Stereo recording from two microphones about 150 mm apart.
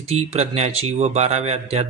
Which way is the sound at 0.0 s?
45° right (ahead or behind).